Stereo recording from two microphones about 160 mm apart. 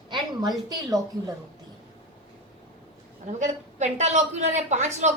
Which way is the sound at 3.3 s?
50° right (ahead or behind).